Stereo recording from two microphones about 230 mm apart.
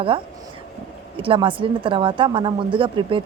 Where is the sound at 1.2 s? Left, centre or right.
Right.